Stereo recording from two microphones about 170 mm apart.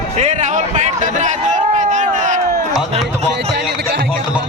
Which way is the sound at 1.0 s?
45° right (ahead or behind).